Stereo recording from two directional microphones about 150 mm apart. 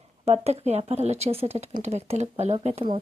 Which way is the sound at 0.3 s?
45° right (ahead or behind).